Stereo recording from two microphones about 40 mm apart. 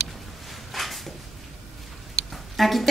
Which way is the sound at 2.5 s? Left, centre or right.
Centre.